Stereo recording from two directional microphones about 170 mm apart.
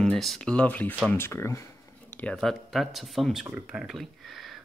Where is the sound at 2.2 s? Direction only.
Centre (ahead or behind).